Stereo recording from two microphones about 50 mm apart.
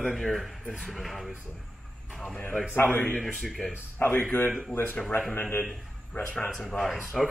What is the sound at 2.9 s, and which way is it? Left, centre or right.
Speech, left.